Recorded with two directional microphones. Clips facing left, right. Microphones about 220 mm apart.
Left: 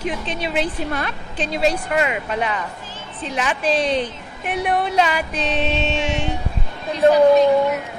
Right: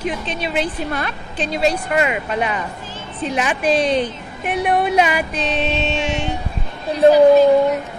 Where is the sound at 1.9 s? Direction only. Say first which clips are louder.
Right 2 dB; 10° right (ahead or behind).